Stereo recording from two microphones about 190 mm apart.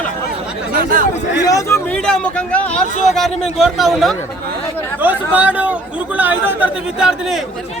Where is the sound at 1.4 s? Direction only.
15° left (ahead or behind).